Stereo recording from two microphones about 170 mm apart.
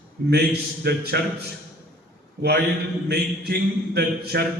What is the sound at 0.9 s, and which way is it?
Speech, 75° right (ahead or behind).